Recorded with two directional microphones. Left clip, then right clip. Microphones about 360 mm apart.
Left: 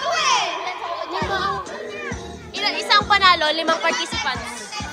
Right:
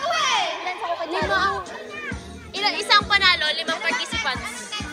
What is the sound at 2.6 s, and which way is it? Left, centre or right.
Music, centre.